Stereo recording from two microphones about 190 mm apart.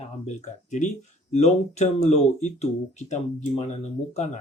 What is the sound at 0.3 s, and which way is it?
Speech, 40° left (ahead or behind).